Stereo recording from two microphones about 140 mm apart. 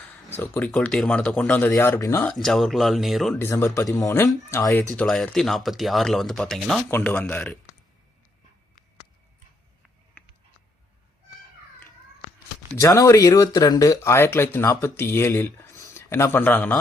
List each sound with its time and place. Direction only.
0.3 s speech: 15° left (ahead or behind)
2.2 s speech: 5° left (ahead or behind)
3.3 s speech: 15° left (ahead or behind)
4.9 s speech: 5° left (ahead or behind)
10.2 s a sound: 10° left (ahead or behind)
12.7 s speech: 25° left (ahead or behind)